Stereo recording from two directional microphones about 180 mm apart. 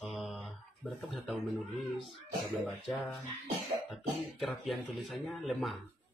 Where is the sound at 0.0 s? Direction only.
Centre (ahead or behind).